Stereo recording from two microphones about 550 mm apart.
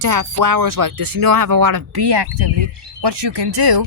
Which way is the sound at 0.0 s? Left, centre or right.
Right.